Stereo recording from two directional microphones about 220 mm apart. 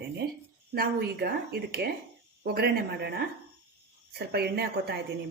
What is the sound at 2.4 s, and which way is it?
A woman's voice, 45° right (ahead or behind).